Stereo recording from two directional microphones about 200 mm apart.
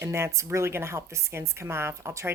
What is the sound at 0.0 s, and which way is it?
Speech, 15° right (ahead or behind).